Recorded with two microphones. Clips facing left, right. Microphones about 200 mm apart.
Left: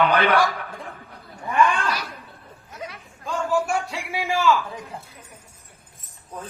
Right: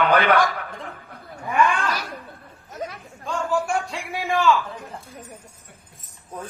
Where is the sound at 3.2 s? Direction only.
5° left (ahead or behind).